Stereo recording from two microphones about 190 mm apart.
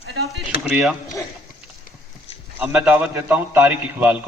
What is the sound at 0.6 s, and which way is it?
Speech, centre (ahead or behind).